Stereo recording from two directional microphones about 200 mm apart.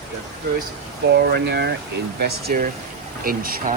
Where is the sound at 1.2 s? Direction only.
55° right (ahead or behind).